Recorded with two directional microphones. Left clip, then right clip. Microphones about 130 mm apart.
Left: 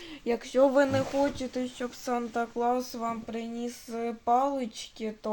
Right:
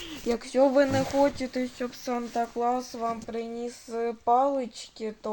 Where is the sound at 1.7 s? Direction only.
10° left (ahead or behind).